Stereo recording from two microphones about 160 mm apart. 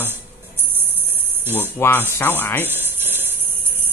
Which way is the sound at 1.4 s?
15° right (ahead or behind).